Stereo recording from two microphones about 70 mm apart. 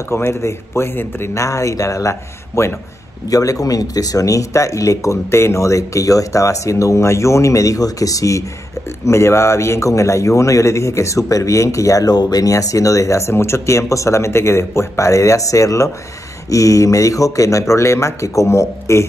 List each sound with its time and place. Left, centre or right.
0.1 s a man's voice: left
1.3 s a man's voice: left